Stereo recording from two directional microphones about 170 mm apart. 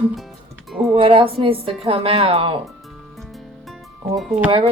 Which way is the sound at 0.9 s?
30° right (ahead or behind).